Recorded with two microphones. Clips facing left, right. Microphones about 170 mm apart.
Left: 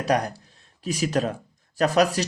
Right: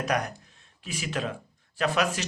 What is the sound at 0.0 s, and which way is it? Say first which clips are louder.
Speech: left 5 dB; 35° left (ahead or behind).